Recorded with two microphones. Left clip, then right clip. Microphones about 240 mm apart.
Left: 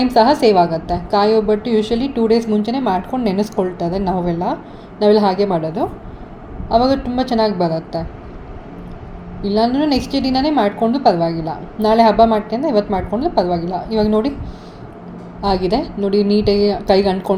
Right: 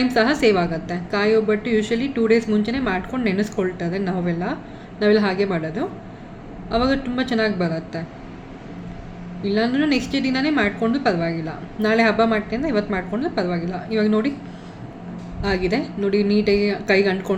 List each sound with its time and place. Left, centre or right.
0.0 s a woman's voice: centre
5.5 s a woman's voice: left
6.7 s a woman's voice: centre
9.4 s a woman's voice: centre
15.4 s a woman's voice: centre